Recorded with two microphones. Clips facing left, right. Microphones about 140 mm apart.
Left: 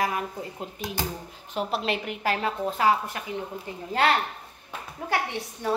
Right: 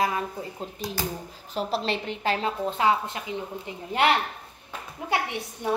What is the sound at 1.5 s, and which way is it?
A woman's voice, 35° right (ahead or behind).